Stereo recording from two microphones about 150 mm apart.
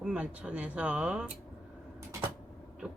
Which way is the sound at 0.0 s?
5° right (ahead or behind).